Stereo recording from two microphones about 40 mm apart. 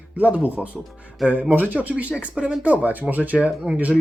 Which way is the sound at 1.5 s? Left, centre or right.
Right.